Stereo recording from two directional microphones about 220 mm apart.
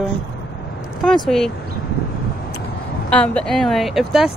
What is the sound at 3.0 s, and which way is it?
Speech, 5° left (ahead or behind).